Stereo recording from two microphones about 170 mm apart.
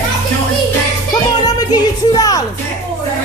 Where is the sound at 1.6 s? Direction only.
25° left (ahead or behind).